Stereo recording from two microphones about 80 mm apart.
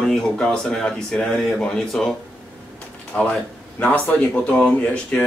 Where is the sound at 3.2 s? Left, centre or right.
Centre.